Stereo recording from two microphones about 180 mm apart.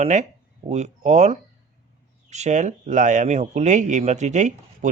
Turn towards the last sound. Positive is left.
turn(degrees=-40)  # may be behind; listen again after turning